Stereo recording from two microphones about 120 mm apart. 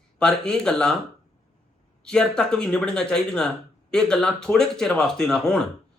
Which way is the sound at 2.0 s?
5° left (ahead or behind).